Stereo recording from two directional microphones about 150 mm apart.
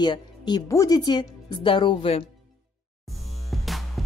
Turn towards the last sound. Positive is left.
turn(degrees=0)  # may be behind; listen again after turning